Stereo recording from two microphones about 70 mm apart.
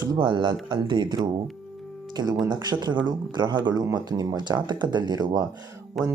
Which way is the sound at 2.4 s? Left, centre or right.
Right.